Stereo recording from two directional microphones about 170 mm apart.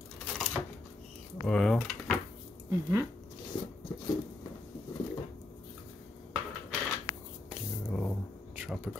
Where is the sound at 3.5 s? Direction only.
30° left (ahead or behind).